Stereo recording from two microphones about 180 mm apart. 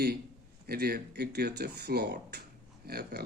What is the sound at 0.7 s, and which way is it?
Speech, 60° right (ahead or behind).